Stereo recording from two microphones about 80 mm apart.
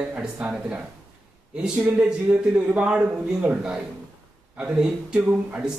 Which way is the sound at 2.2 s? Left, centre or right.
Centre.